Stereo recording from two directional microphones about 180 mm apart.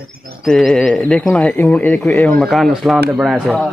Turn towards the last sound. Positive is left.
turn(degrees=0)  # may be behind; listen again after turning